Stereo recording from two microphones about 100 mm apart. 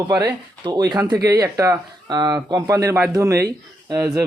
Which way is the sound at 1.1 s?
35° right (ahead or behind).